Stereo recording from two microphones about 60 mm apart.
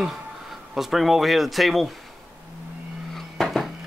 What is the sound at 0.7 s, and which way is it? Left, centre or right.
Speech, centre.